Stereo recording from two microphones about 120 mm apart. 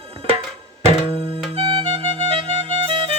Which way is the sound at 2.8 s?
50° right (ahead or behind).